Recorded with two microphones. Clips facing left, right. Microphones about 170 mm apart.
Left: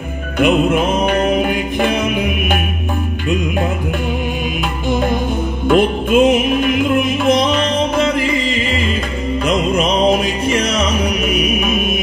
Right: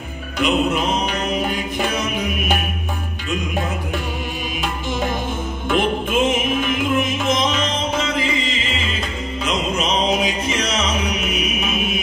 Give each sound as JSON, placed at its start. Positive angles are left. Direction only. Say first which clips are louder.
{"t": 0.4, "sound": "music", "louder": "left 5 dB", "side_deg": 55}
{"t": 5.7, "sound": "music", "louder": "left 7 dB", "side_deg": 50}
{"t": 10.1, "sound": "music", "louder": "left 5 dB", "side_deg": 60}